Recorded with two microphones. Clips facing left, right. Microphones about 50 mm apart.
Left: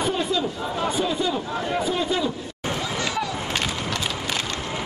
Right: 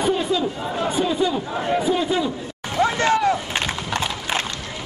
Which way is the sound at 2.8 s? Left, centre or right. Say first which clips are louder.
Right 11 dB; right.